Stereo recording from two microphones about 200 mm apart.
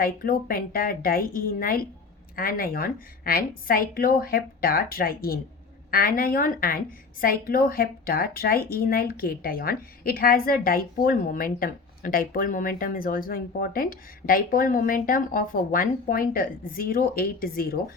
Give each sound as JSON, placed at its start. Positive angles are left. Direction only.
{"t": 0.0, "sound": "a woman's voice", "side_deg": 45}